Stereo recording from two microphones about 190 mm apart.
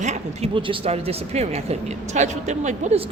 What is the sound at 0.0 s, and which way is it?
Speech, 35° right (ahead or behind).